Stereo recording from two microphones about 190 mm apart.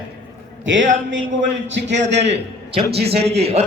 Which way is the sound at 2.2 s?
35° right (ahead or behind).